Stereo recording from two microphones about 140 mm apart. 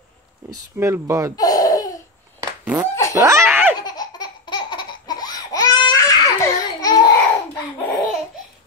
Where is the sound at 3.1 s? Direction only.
20° right (ahead or behind).